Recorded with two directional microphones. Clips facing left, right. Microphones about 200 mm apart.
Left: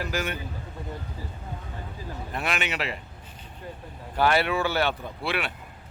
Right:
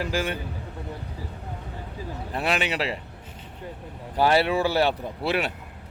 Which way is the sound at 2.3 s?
35° right (ahead or behind).